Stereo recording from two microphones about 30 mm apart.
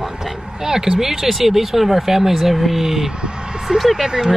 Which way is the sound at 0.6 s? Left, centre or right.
Centre.